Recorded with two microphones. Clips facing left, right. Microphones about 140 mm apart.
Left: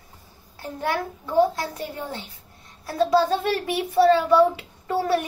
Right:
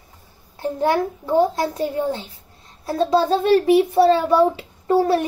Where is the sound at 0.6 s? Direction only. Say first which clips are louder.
Right 7 dB; 25° right (ahead or behind).